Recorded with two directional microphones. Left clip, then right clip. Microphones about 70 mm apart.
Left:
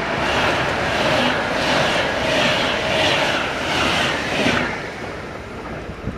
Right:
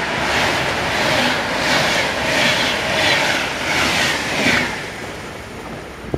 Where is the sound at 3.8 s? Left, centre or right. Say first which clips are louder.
Right 2 dB; right.